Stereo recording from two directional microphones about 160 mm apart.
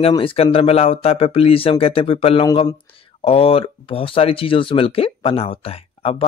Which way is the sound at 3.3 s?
35° left (ahead or behind).